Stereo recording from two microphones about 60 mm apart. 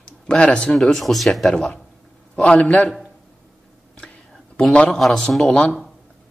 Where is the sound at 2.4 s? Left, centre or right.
Left.